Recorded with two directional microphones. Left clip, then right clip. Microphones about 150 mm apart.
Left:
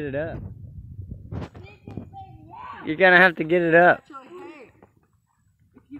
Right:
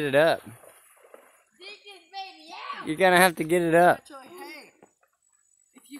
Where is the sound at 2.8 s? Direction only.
10° right (ahead or behind).